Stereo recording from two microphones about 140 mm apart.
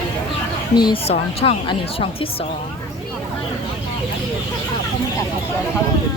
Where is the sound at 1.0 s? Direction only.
45° left (ahead or behind).